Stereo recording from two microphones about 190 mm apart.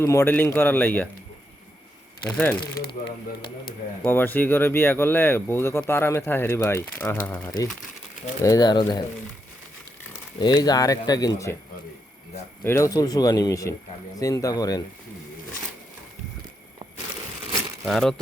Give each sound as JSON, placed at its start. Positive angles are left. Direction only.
{"t": 0.0, "sound": "speech", "side_deg": 15}
{"t": 2.3, "sound": "speech", "side_deg": 10}
{"t": 2.7, "sound": "speech", "side_deg": 55}
{"t": 4.0, "sound": "speech", "side_deg": 10}
{"t": 8.4, "sound": "speech", "side_deg": 20}
{"t": 10.1, "sound": "speech", "side_deg": 20}
{"t": 12.6, "sound": "speech", "side_deg": 15}
{"t": 17.8, "sound": "speech", "side_deg": 0}